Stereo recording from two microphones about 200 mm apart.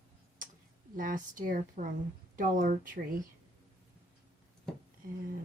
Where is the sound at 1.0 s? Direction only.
40° right (ahead or behind).